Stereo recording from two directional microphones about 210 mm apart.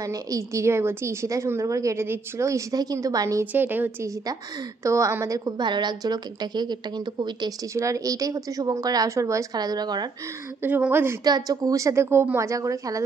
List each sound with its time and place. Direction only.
0.0 s a woman's voice: 15° right (ahead or behind)
10.6 s a woman's voice: 10° right (ahead or behind)